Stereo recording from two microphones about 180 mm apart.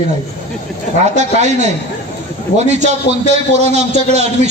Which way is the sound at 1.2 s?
40° right (ahead or behind).